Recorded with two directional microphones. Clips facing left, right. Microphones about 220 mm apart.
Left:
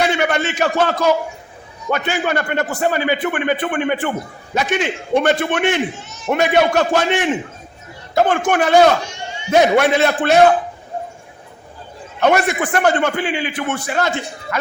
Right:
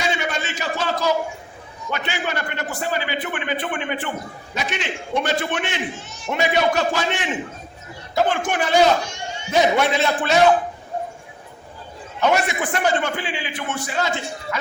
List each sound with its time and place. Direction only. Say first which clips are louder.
0.0 s a sound: left 7 dB; 65° left (ahead or behind)
1.9 s a man's voice: left 7 dB; 50° left (ahead or behind)
12.2 s a man's voice: left 4 dB; 55° left (ahead or behind)